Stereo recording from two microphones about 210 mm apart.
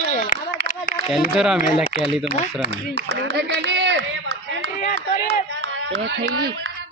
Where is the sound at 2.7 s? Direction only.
55° right (ahead or behind).